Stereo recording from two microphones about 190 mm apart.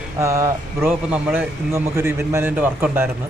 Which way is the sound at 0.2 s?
15° right (ahead or behind).